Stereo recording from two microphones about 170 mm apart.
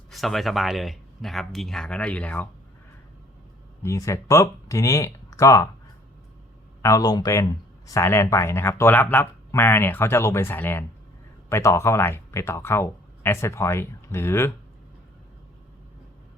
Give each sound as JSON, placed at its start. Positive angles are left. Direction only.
{"t": 0.1, "sound": "speech", "side_deg": 0}
{"t": 3.8, "sound": "speech", "side_deg": 20}
{"t": 6.8, "sound": "speech", "side_deg": 20}